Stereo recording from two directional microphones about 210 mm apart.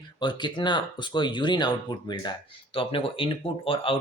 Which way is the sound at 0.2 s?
20° left (ahead or behind).